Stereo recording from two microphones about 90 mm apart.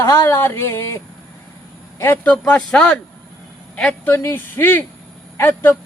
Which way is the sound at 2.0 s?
25° left (ahead or behind).